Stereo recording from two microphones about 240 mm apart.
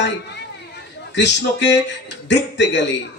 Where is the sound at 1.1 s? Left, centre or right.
Left.